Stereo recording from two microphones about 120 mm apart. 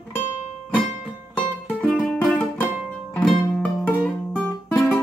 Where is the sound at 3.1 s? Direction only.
10° left (ahead or behind).